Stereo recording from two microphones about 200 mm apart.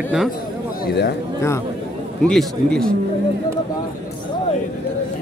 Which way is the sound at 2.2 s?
5° left (ahead or behind).